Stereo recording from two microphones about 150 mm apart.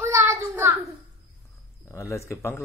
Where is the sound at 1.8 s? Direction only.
20° left (ahead or behind).